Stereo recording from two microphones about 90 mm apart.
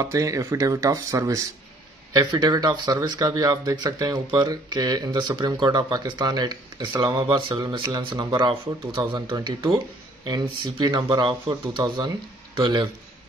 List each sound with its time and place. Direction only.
0.0 s speech: 40° right (ahead or behind)
2.1 s speech: 50° right (ahead or behind)
7.2 s speech: 65° right (ahead or behind)